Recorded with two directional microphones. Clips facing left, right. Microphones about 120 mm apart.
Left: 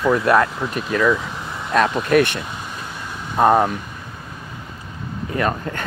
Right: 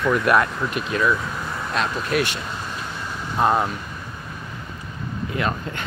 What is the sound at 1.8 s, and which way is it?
Speech, 55° left (ahead or behind).